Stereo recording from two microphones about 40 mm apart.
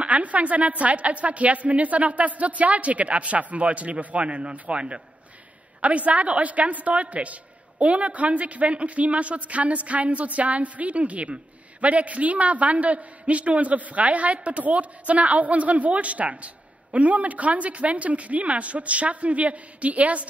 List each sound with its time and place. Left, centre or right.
0.0 s a man's voice: right